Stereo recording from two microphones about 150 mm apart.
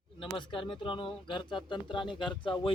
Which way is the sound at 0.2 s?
35° left (ahead or behind).